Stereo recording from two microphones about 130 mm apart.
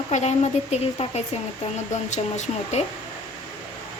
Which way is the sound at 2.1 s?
65° left (ahead or behind).